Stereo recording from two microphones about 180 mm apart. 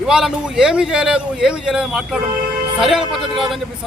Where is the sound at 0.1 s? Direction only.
5° right (ahead or behind).